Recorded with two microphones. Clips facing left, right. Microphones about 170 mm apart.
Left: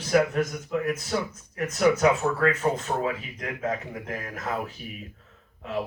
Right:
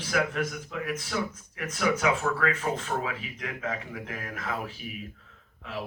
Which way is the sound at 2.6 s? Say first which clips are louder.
Left 5 dB; 55° left (ahead or behind).